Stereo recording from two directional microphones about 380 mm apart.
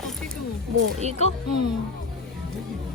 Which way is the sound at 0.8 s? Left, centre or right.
Centre.